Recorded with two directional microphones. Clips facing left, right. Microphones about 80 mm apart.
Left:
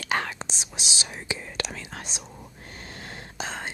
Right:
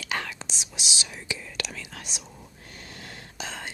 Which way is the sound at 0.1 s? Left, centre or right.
Left.